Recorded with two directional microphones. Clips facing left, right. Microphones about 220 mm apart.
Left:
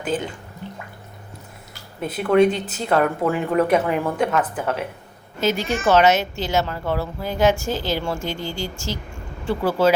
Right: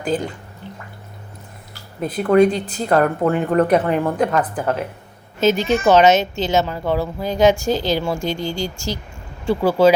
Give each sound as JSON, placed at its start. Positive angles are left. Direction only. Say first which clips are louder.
{"t": 0.0, "sound": "speech", "louder": "right 3 dB", "side_deg": 5}
{"t": 2.0, "sound": "speech", "louder": "right 2 dB", "side_deg": 5}
{"t": 5.4, "sound": "speech", "louder": "right 5 dB", "side_deg": -20}